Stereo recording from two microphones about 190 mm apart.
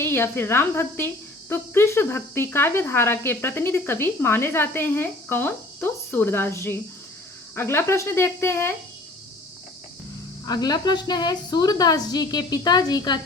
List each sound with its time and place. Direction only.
0.0 s speech: 10° left (ahead or behind)
10.4 s a woman's voice: 20° left (ahead or behind)